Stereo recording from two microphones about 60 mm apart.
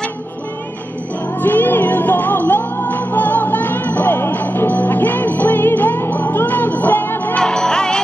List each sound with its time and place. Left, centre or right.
1.4 s music: left
7.3 s music: centre